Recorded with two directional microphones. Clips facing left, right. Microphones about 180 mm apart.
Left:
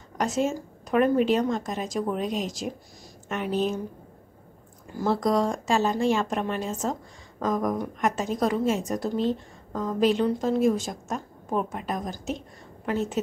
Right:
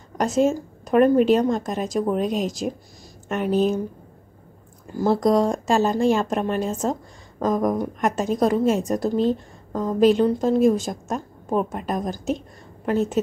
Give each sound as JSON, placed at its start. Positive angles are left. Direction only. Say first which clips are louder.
{"t": 0.2, "sound": "a woman's voice", "louder": "right 6 dB", "side_deg": -40}
{"t": 5.0, "sound": "a woman's voice", "louder": "right 5 dB", "side_deg": -40}